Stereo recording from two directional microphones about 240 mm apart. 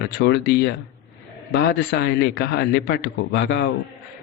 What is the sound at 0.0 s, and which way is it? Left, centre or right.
A man's voice, left.